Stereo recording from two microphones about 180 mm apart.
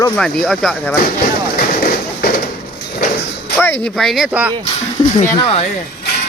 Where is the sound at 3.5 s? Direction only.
10° left (ahead or behind).